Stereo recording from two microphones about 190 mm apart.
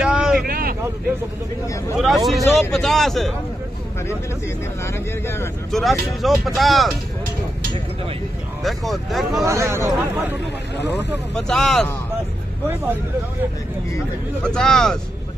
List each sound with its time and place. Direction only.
0.0 s vehicle: 5° right (ahead or behind)
0.4 s vehicle: 50° right (ahead or behind)
2.0 s speech: centre (ahead or behind)
4.8 s speech: 10° left (ahead or behind)
5.7 s speech: centre (ahead or behind)
8.6 s speech: centre (ahead or behind)
9.4 s speech: 15° right (ahead or behind)
10.8 s speech: 65° left (ahead or behind)
11.3 s speech: centre (ahead or behind)
14.4 s speech: 5° left (ahead or behind)